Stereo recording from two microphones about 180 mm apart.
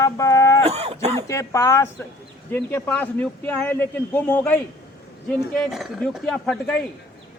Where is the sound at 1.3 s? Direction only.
15° left (ahead or behind).